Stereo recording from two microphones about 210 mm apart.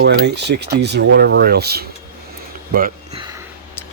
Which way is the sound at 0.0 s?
55° right (ahead or behind).